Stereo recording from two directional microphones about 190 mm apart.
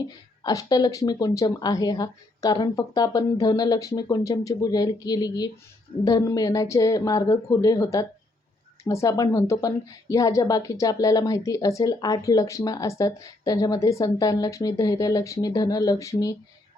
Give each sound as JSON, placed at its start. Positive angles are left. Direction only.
{"t": 0.4, "sound": "a woman's voice", "side_deg": 20}